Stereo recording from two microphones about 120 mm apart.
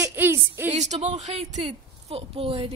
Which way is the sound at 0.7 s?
70° right (ahead or behind).